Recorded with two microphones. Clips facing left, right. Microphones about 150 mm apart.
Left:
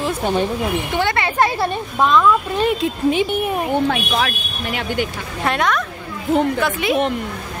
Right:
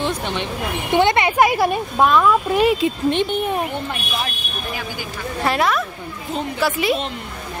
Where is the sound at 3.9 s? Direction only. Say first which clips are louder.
Left 7 dB; 90° left; by 5.1 s 70° left (ahead or behind).